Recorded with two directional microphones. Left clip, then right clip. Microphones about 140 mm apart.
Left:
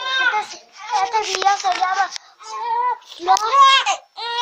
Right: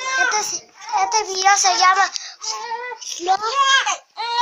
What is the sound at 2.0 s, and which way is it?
Child singing, 5° right (ahead or behind).